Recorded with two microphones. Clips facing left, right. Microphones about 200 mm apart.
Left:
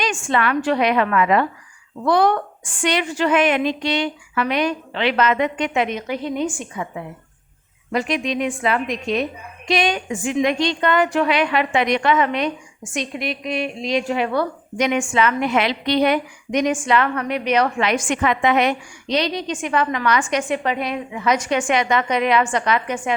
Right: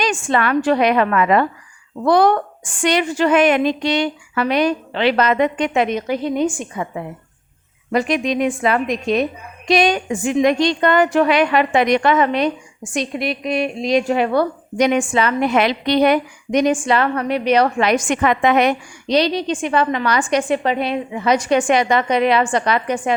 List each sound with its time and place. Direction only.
0.0 s a woman's voice: 40° right (ahead or behind)